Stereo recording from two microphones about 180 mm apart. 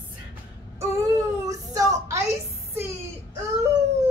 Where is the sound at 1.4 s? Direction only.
20° right (ahead or behind).